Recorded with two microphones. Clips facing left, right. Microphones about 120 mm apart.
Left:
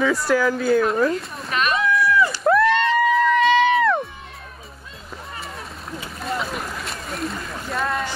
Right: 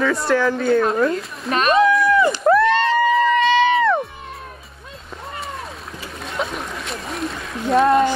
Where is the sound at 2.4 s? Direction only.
Centre (ahead or behind).